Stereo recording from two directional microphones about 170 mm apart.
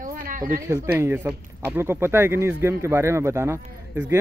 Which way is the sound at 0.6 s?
20° right (ahead or behind).